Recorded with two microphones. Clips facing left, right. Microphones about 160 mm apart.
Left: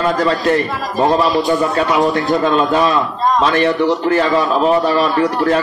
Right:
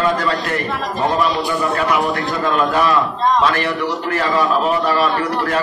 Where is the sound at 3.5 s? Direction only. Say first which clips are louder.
Left 6 dB; 25° left (ahead or behind).